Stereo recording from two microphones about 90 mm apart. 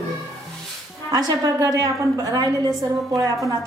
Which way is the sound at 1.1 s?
40° right (ahead or behind).